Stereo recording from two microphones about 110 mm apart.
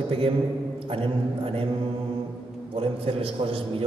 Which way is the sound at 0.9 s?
55° right (ahead or behind).